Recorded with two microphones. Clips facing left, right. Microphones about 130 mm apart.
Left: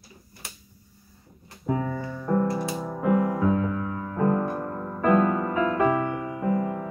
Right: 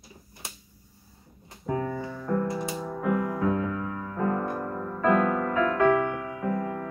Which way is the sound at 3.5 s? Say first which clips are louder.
Left 2 dB; 5° left (ahead or behind).